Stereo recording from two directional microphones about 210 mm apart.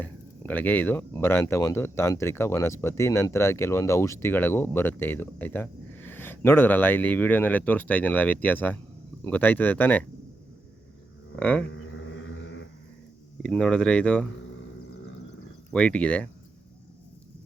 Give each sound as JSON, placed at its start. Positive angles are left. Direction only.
{"t": 0.0, "sound": "speech", "side_deg": 10}
{"t": 11.3, "sound": "speech", "side_deg": 5}
{"t": 11.9, "sound": "a sound", "side_deg": 65}
{"t": 13.4, "sound": "speech", "side_deg": 5}
{"t": 15.7, "sound": "speech", "side_deg": 5}